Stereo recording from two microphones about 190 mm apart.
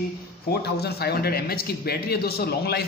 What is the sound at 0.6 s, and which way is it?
A man's voice, 55° left (ahead or behind).